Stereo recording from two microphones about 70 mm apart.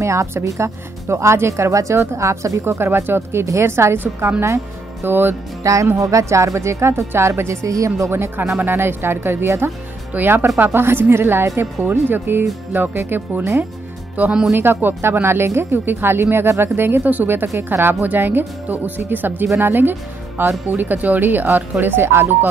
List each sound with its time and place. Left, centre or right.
0.0 s a woman's voice: right
2.7 s speech: right
5.6 s a woman's voice: right
8.1 s speech: right